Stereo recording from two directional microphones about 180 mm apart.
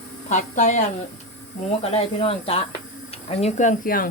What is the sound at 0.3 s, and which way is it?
Speech, 40° left (ahead or behind).